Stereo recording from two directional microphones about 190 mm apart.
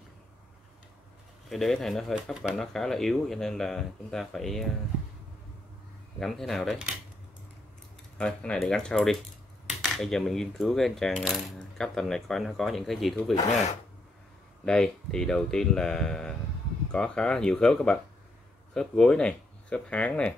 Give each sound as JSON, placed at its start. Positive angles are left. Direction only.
{"t": 1.5, "sound": "speech", "side_deg": 0}
{"t": 6.1, "sound": "speech", "side_deg": 0}
{"t": 8.2, "sound": "speech", "side_deg": 5}
{"t": 9.7, "sound": "coin", "side_deg": 0}
{"t": 11.8, "sound": "speech", "side_deg": 5}
{"t": 13.5, "sound": "speech", "side_deg": 35}
{"t": 14.6, "sound": "speech", "side_deg": 5}